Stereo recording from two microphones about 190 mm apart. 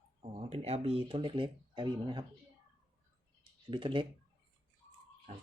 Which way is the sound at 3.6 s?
25° right (ahead or behind).